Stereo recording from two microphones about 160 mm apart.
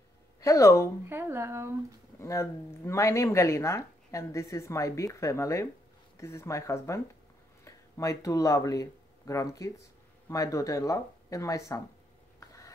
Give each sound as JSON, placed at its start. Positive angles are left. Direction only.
{"t": 0.4, "sound": "speech", "side_deg": 20}
{"t": 1.0, "sound": "speech", "side_deg": -15}
{"t": 2.1, "sound": "speech", "side_deg": 15}
{"t": 12.4, "sound": "a sound", "side_deg": 20}